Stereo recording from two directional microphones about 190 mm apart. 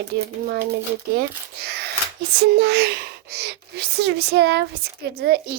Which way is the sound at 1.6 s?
60° right (ahead or behind).